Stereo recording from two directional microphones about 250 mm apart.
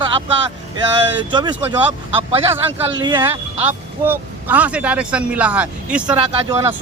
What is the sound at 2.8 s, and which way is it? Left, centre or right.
Speech, centre.